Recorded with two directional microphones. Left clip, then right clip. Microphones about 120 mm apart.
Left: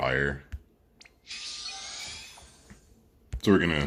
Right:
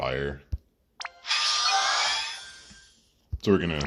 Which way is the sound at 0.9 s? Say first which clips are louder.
Right 15 dB; 10° right (ahead or behind).